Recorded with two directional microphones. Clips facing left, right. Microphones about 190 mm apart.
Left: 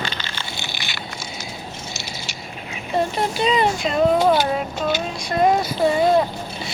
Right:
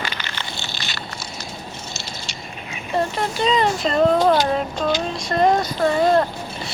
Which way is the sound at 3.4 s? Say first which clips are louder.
Right 1 dB; 10° left (ahead or behind).